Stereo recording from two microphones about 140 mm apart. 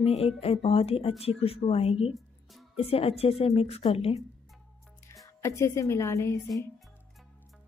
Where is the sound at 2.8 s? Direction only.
45° left (ahead or behind).